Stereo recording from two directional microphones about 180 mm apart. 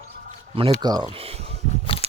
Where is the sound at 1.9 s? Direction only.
30° left (ahead or behind).